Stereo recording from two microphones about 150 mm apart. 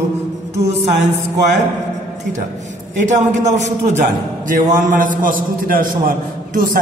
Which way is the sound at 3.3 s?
50° right (ahead or behind).